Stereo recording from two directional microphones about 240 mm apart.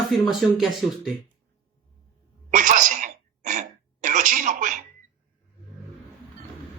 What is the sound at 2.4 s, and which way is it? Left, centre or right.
Throat clearing, right.